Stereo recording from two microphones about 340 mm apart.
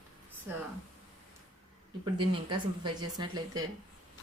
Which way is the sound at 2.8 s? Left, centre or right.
Centre.